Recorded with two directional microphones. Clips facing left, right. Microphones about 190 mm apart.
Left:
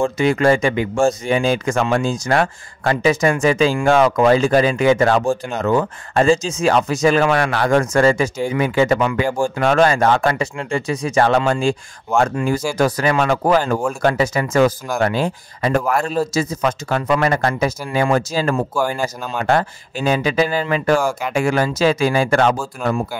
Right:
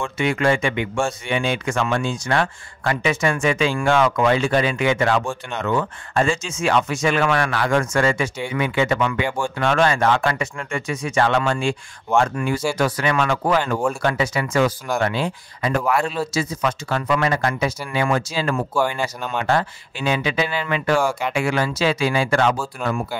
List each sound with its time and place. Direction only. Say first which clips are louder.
0.0 s speech: left 5 dB; 35° left (ahead or behind)
12.7 s speech: left 4 dB; 40° left (ahead or behind)
17.4 s speech: left 3 dB; 35° left (ahead or behind)
22.8 s speech: left 4 dB; centre (ahead or behind)